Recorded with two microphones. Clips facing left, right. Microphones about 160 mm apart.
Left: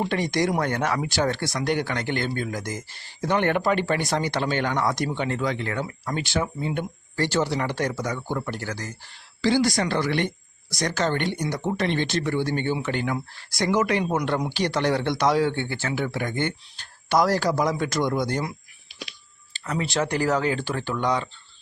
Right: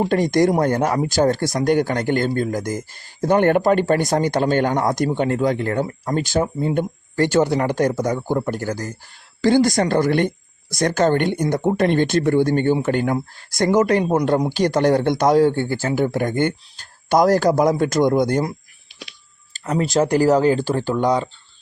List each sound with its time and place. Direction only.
0.0 s speech: 45° right (ahead or behind)
19.5 s speech: 40° right (ahead or behind)